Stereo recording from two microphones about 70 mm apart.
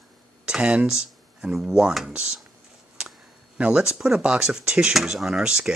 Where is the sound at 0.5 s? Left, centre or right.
Centre.